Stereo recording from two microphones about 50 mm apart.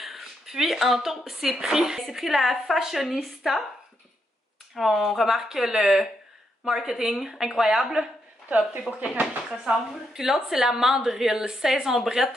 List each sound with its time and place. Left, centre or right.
0.0 s a woman's voice: centre
4.7 s a woman's voice: centre
9.0 s speech: right
10.1 s a woman's voice: centre